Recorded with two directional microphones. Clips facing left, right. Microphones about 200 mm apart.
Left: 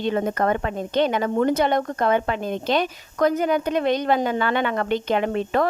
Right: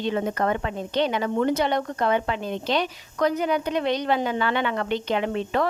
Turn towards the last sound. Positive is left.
turn(degrees=50)  # may be behind; listen again after turning